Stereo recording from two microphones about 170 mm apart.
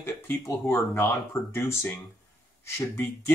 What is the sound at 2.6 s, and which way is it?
Speech, 15° left (ahead or behind).